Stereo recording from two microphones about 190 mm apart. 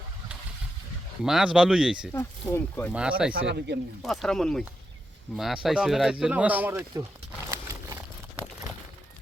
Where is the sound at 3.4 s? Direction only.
60° right (ahead or behind).